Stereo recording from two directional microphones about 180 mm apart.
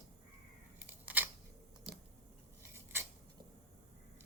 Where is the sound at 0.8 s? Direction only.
10° right (ahead or behind).